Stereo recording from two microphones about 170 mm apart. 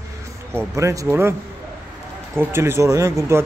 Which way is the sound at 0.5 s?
20° right (ahead or behind).